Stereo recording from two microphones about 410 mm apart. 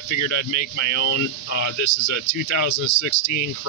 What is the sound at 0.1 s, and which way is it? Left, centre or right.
Speech, left.